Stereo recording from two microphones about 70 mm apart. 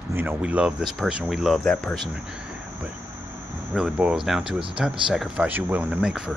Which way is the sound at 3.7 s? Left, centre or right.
Centre.